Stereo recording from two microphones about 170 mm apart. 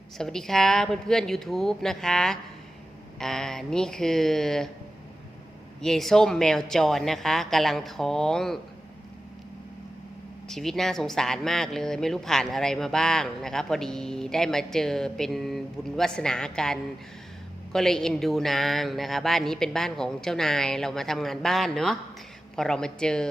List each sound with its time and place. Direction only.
0.2 s speech: 5° left (ahead or behind)
5.8 s speech: centre (ahead or behind)
10.5 s speech: centre (ahead or behind)